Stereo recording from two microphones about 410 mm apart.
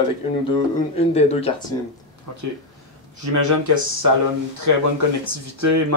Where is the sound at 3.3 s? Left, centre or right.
Right.